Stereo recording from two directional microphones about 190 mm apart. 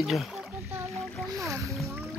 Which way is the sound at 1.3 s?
15° right (ahead or behind).